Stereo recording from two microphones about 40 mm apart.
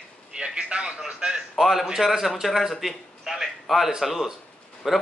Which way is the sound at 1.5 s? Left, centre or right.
Centre.